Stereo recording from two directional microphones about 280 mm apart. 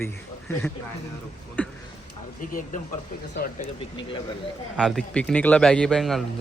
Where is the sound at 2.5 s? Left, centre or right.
Left.